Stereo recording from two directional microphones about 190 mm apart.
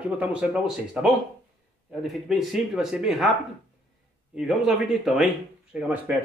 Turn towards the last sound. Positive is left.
turn(degrees=-5)  # may be behind; listen again after turning